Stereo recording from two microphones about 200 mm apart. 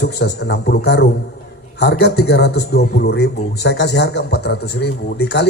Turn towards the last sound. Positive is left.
turn(degrees=55)  # may be behind; listen again after turning